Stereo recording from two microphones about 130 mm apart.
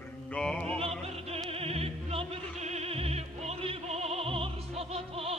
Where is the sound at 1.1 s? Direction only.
50° right (ahead or behind).